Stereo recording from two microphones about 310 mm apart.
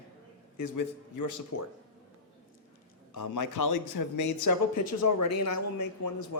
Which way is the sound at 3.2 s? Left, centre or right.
Left.